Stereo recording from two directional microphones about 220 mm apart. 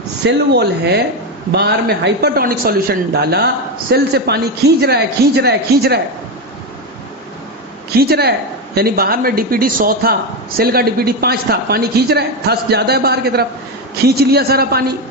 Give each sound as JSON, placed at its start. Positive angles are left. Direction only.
{"t": 0.3, "sound": "a man's voice", "side_deg": -50}
{"t": 7.9, "sound": "a man's voice", "side_deg": -45}